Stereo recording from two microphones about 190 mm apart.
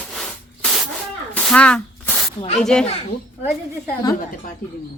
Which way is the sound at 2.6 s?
5° left (ahead or behind).